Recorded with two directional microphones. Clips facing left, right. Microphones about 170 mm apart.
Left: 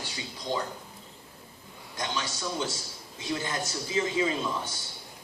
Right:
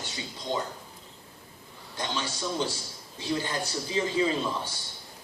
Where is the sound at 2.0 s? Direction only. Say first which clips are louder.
Right 1 dB; 30° right (ahead or behind).